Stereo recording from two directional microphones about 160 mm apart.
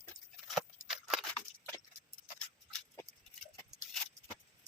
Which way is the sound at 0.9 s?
5° right (ahead or behind).